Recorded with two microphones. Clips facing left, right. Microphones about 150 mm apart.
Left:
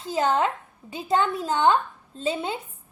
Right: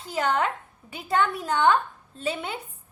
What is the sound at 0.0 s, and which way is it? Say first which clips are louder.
A woman's voice: left 2 dB; 30° left (ahead or behind).